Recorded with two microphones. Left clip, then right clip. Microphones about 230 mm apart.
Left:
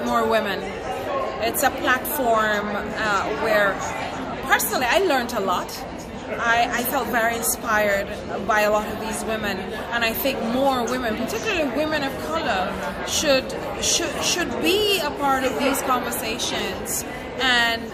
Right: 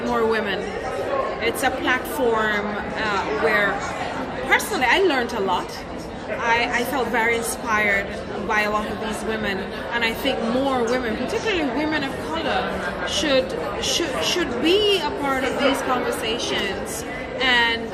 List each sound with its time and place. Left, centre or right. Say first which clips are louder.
0.1 s a woman's voice: left 1 dB; left
4.4 s a woman's voice: right 1 dB; left
13.1 s a woman's voice: even; left